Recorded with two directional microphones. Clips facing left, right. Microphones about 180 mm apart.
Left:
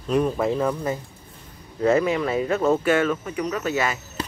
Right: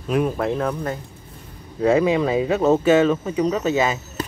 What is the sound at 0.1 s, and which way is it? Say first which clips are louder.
Speech: even; centre (ahead or behind).